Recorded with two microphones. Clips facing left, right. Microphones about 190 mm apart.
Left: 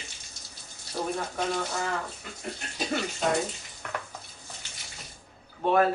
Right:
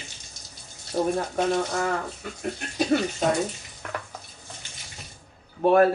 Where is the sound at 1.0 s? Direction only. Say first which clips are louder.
Right 7 dB; 25° right (ahead or behind).